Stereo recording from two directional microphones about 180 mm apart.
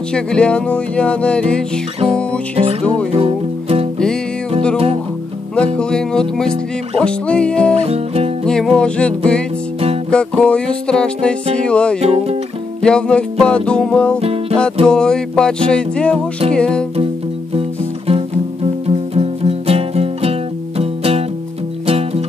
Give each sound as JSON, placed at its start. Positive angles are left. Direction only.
{"t": 0.1, "sound": "music", "side_deg": 5}
{"t": 2.5, "sound": "music", "side_deg": -35}
{"t": 5.8, "sound": "music", "side_deg": 5}
{"t": 7.7, "sound": "music", "side_deg": -35}
{"t": 8.5, "sound": "music", "side_deg": 5}
{"t": 12.0, "sound": "music", "side_deg": -35}
{"t": 12.8, "sound": "music", "side_deg": 5}
{"t": 17.6, "sound": "music", "side_deg": -30}